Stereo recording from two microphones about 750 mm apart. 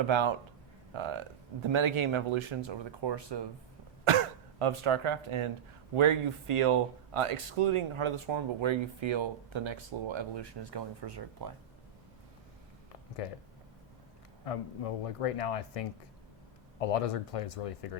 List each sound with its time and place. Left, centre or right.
0.1 s speech: right
4.6 s speech: right
13.2 s speech: left
14.4 s speech: left